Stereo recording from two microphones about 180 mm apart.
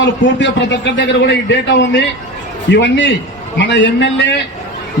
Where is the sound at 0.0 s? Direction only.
75° left (ahead or behind).